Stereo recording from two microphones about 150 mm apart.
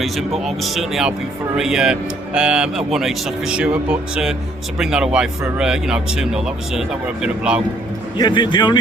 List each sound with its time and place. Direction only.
0.0 s speech: centre (ahead or behind)
8.2 s a man's voice: 30° left (ahead or behind)